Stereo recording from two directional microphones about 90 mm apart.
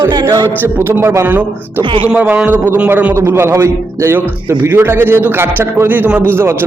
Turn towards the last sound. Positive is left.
turn(degrees=-15)  # may be behind; listen again after turning